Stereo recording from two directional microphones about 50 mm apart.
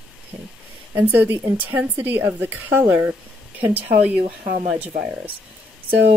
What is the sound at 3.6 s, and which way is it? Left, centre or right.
Speech, right.